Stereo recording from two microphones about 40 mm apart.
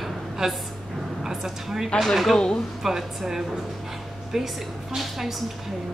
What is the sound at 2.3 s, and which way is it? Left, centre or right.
Speech, centre.